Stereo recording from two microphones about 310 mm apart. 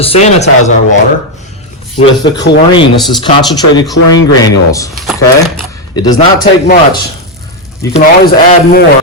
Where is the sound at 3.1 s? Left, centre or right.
Centre.